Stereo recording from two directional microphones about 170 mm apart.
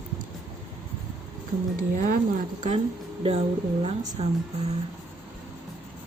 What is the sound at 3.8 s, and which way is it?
Speech, 40° right (ahead or behind).